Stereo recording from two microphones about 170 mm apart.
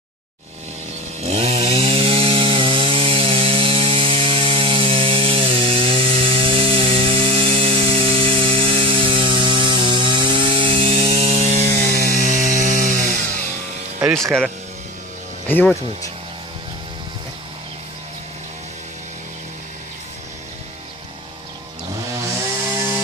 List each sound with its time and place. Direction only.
1.2 s chainsaw: 40° right (ahead or behind)
11.7 s chainsaw: 60° right (ahead or behind)
14.1 s speech: 5° left (ahead or behind)